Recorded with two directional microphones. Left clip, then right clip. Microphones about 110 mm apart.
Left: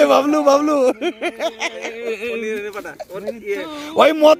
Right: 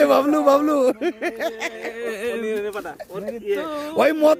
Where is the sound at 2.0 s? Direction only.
60° right (ahead or behind).